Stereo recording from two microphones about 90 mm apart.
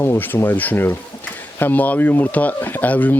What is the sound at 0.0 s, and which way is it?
Speech, 25° left (ahead or behind).